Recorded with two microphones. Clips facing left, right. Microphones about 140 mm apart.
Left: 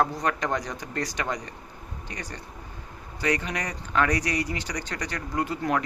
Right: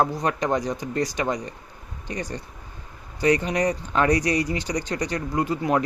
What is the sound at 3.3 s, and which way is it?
Speech, 30° right (ahead or behind).